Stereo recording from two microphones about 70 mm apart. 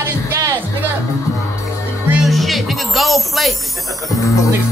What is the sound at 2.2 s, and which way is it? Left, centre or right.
Music, centre.